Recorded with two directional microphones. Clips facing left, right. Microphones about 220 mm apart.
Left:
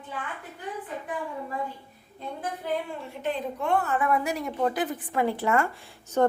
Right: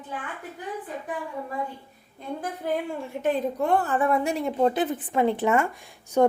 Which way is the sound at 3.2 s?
35° right (ahead or behind).